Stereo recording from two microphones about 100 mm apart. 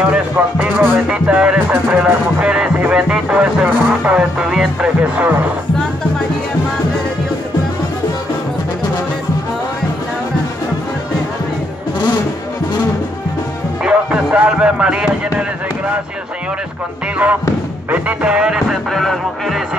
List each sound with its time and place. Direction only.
0.0 s music: 10° right (ahead or behind)
1.7 s speech: 20° right (ahead or behind)
13.8 s music: 10° right (ahead or behind)
17.9 s music: 15° right (ahead or behind)